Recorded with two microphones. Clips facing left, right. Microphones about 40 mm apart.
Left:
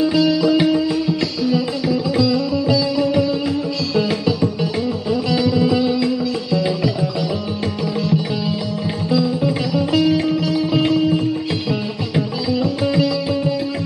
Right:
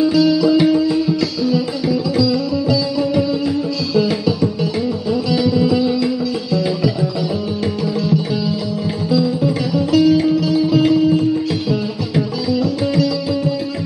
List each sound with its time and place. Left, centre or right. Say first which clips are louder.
0.2 s music: right 2 dB; centre
2.1 s music: right 1 dB; centre
5.4 s music: right 1 dB; centre